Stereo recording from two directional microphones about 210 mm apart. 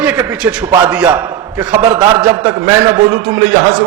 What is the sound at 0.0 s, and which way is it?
A man's voice, 5° right (ahead or behind).